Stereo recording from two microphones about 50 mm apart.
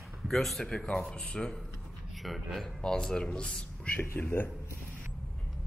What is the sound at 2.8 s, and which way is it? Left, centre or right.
A man's voice, centre.